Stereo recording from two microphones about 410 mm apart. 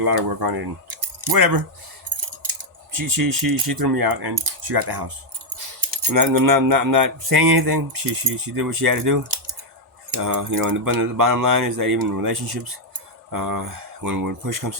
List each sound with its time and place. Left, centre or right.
0.0 s speech: right
2.0 s coin: right
3.2 s speech: right
8.2 s speech: right
8.5 s speech: right
13.3 s speech: right